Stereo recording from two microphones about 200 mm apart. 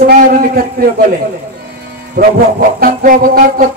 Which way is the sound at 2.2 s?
50° right (ahead or behind).